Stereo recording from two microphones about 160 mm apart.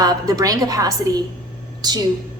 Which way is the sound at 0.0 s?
25° right (ahead or behind).